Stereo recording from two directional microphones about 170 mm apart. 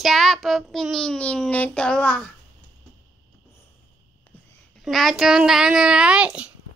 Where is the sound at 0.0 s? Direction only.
Centre (ahead or behind).